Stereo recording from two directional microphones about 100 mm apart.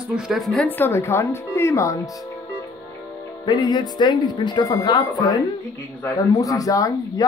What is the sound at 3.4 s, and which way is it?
Speech, 45° left (ahead or behind).